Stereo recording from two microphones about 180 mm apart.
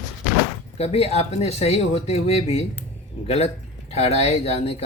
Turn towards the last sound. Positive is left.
turn(degrees=35)  # may be behind; listen again after turning